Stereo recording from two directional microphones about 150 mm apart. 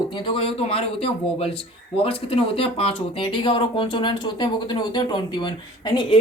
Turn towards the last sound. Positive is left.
turn(degrees=30)  # may be behind; listen again after turning